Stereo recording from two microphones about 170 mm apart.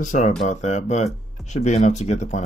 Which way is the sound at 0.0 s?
45° left (ahead or behind).